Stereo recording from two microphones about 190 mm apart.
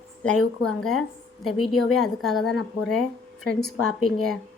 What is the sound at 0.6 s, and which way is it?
A woman's voice, 5° left (ahead or behind).